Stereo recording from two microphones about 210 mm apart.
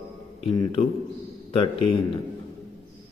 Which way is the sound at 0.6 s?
25° left (ahead or behind).